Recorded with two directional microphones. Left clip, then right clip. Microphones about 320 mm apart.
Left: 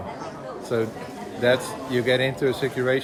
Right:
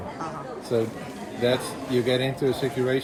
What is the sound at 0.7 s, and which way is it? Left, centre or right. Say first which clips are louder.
Speech: even; centre.